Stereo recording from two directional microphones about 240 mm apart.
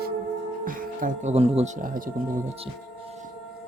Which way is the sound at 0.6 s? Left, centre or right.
Right.